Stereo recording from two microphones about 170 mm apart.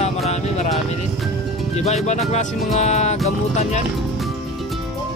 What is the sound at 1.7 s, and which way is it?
Speech, 40° left (ahead or behind).